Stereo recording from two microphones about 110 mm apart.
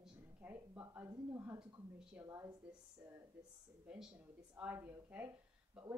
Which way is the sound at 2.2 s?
15° right (ahead or behind).